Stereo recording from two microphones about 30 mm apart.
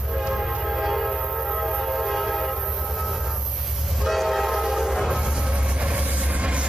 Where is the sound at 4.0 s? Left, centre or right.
Centre.